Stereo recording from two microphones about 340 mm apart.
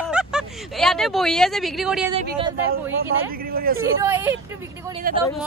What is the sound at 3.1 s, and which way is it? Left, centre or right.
Speech, right.